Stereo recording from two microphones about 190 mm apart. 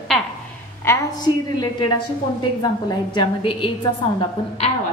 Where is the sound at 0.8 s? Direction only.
20° left (ahead or behind).